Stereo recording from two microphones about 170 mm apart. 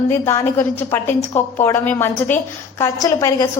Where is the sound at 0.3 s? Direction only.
15° left (ahead or behind).